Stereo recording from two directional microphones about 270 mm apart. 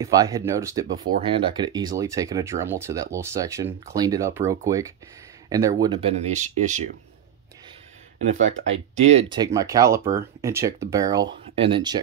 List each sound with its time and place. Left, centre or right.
0.0 s speech: centre
8.4 s speech: right
9.1 s speech: centre